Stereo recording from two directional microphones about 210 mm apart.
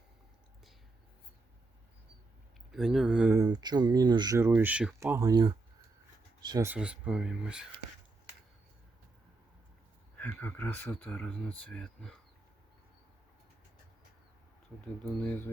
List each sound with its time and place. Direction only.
2.7 s speech: centre (ahead or behind); by 6.7 s 20° right (ahead or behind)
6.7 s speech: 5° right (ahead or behind)
10.2 s speech: 10° left (ahead or behind)
14.8 s speech: 5° left (ahead or behind)